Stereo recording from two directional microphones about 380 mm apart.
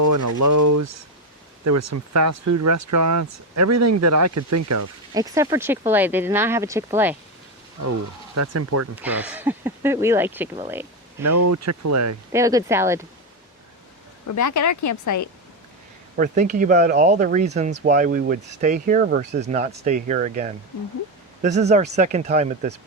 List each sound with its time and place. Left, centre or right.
0.0 s speech: right
5.1 s speech: centre
8.4 s speech: right
9.0 s speech: centre
11.2 s speech: right
12.3 s speech: centre
14.3 s speech: left
16.1 s speech: right